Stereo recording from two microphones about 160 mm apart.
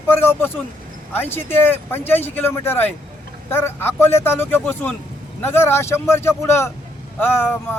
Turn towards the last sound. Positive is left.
turn(degrees=15)  # may be behind; listen again after turning